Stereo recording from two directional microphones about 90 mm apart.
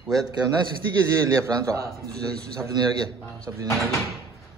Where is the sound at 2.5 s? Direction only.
40° right (ahead or behind).